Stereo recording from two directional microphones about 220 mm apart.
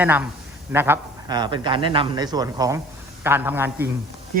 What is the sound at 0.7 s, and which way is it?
Speech, 10° right (ahead or behind).